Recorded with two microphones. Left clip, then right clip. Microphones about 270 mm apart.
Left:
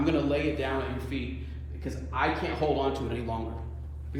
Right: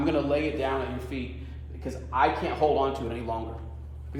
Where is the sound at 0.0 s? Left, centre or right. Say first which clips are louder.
Right 1 dB; centre.